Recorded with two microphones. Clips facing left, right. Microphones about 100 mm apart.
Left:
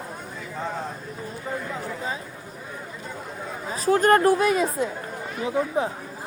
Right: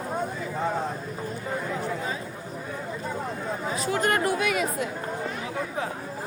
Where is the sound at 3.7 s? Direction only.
35° left (ahead or behind).